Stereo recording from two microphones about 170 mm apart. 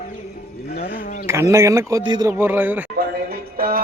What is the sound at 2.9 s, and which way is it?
Music, 60° right (ahead or behind).